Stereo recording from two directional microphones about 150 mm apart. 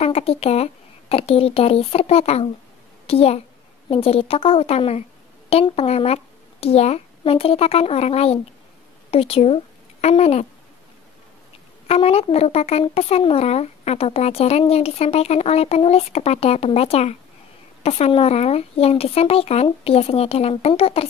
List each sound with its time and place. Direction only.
0.0 s speech: 40° left (ahead or behind)
11.9 s speech: 40° left (ahead or behind)